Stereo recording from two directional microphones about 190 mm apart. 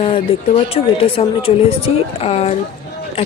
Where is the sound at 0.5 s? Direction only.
30° left (ahead or behind).